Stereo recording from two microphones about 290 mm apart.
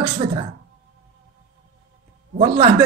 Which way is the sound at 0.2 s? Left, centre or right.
Centre.